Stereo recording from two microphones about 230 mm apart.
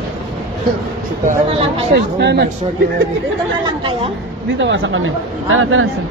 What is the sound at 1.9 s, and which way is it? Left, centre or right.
Speech, right.